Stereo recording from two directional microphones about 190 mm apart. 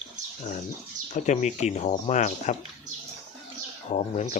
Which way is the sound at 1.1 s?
40° left (ahead or behind).